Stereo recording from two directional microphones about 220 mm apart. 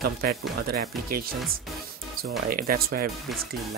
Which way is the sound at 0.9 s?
Centre (ahead or behind).